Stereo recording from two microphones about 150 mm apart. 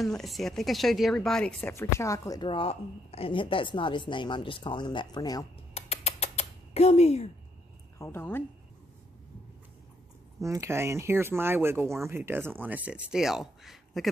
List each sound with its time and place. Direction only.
0.0 s speech: centre (ahead or behind)
1.7 s a woman's voice: 20° left (ahead or behind)
5.8 s a sound: 45° left (ahead or behind)
8.0 s speech: 15° left (ahead or behind)
10.4 s speech: 20° right (ahead or behind); by 14.1 s centre (ahead or behind)